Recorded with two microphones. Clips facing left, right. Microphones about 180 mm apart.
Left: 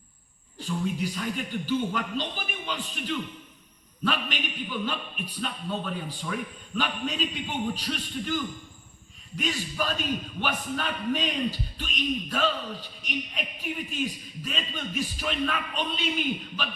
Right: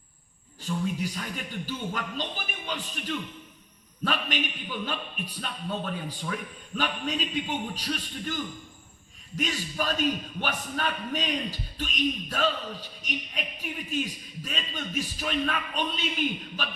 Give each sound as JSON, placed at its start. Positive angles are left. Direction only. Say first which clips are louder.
{"t": 0.6, "sound": "a man's voice", "louder": "left 1 dB", "side_deg": -45}